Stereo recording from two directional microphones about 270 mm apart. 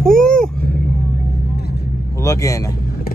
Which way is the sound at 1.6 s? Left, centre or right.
Left.